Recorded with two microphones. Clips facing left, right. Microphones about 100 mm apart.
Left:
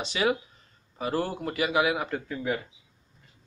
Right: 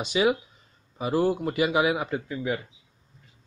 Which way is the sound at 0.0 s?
15° right (ahead or behind).